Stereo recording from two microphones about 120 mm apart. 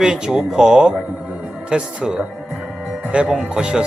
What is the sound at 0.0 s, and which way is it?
Speech, 5° right (ahead or behind).